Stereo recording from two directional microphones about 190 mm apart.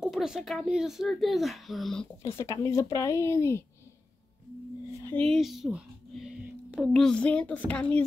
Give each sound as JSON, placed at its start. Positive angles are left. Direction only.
{"t": 0.0, "sound": "a child's voice", "side_deg": -5}
{"t": 2.2, "sound": "speech", "side_deg": 15}
{"t": 5.0, "sound": "speech", "side_deg": 5}